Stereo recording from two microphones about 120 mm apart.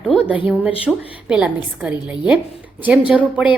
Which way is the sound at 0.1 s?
10° right (ahead or behind).